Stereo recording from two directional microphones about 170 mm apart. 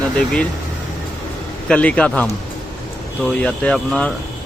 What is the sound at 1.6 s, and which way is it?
Speech, 5° left (ahead or behind).